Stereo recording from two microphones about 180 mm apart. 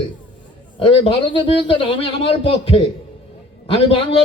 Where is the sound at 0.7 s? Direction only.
30° left (ahead or behind).